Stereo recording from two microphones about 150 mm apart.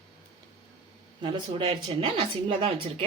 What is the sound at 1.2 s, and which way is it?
A woman's voice, 35° right (ahead or behind).